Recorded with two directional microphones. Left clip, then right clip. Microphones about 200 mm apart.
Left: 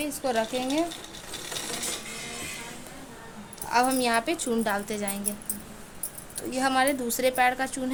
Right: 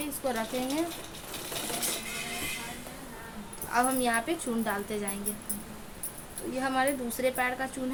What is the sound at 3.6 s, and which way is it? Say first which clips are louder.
A woman's voice: left 4 dB; 45° left (ahead or behind).